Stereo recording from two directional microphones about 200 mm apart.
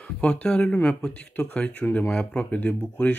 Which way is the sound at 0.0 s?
5° left (ahead or behind).